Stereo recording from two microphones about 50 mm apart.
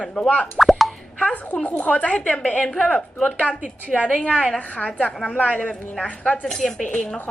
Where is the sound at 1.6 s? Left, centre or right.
Left.